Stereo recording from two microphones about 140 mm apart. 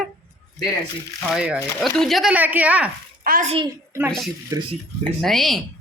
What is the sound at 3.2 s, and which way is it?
Speech, 80° right.